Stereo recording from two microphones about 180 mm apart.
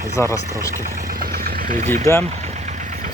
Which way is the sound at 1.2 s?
55° right (ahead or behind).